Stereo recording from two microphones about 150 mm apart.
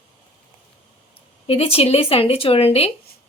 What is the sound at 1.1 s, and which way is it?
A woman's voice, 40° left (ahead or behind).